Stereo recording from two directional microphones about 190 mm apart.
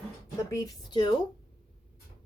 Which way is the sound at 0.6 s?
25° left (ahead or behind).